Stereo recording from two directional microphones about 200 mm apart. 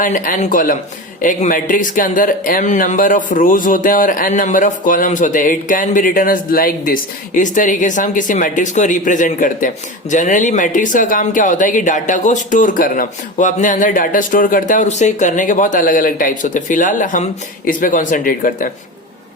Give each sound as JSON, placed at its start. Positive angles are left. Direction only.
{"t": 0.0, "sound": "speech", "side_deg": 40}